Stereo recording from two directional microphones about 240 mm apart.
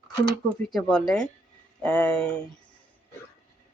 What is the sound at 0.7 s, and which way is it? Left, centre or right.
A woman's voice, centre.